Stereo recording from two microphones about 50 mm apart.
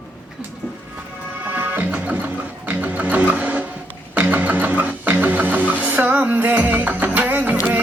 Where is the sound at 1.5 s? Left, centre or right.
Right.